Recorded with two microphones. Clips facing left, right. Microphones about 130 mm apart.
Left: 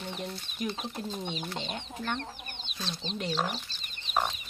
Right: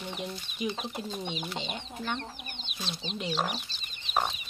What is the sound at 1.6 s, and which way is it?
Speech, 5° right (ahead or behind).